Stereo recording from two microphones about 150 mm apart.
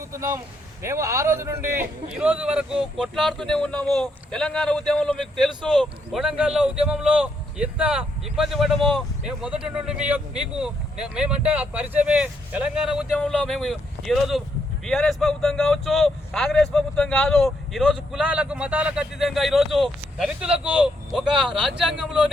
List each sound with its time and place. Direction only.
0.1 s a man's voice: 20° right (ahead or behind); by 22.3 s 5° right (ahead or behind)